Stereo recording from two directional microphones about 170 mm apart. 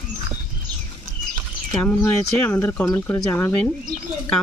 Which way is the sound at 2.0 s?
10° left (ahead or behind).